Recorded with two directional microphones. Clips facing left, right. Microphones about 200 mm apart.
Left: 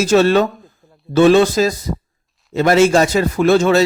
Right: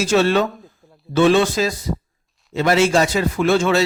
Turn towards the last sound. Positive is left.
turn(degrees=40)  # may be behind; listen again after turning